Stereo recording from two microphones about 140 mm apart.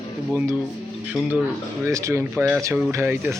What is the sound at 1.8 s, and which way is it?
Speech, 20° right (ahead or behind).